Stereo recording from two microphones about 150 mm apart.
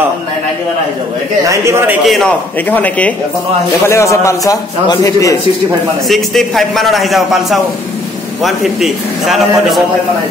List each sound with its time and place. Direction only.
1.5 s a man's voice: 20° right (ahead or behind)
2.0 s a man's voice: centre (ahead or behind); by 5.4 s 25° left (ahead or behind)
6.0 s a man's voice: centre (ahead or behind)